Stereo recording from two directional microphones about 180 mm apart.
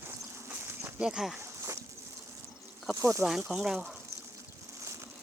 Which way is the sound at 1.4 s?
15° right (ahead or behind).